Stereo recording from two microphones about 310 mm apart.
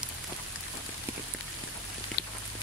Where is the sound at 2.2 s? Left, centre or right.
Left.